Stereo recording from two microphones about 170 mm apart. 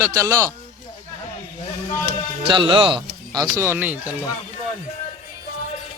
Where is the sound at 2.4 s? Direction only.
30° right (ahead or behind); by 4.1 s 10° right (ahead or behind).